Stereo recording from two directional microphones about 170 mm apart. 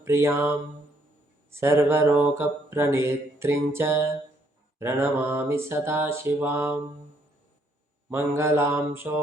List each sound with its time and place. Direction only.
0.0 s mantra: 15° right (ahead or behind)
8.1 s mantra: 15° right (ahead or behind)